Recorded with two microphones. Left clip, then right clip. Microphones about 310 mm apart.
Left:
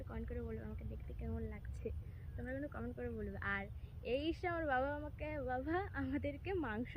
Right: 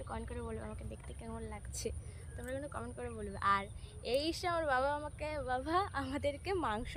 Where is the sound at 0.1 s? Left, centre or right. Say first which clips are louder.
Right 3 dB; centre.